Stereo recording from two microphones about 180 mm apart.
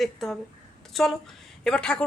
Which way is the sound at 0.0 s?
Centre (ahead or behind).